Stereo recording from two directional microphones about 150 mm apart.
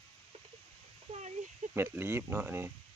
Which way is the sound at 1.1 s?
50° right (ahead or behind).